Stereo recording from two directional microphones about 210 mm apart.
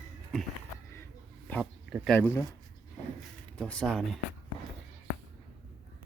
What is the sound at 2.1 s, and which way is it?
Speech, 10° left (ahead or behind).